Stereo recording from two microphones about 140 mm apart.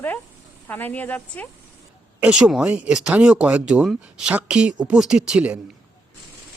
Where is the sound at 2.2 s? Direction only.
10° right (ahead or behind).